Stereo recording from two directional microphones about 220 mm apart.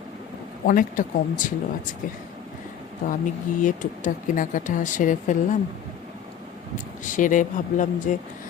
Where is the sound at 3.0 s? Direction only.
35° left (ahead or behind).